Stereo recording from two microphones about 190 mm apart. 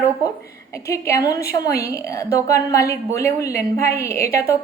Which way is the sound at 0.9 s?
15° left (ahead or behind).